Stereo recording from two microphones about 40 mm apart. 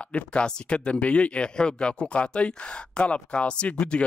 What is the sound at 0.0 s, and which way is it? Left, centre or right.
Speech, left.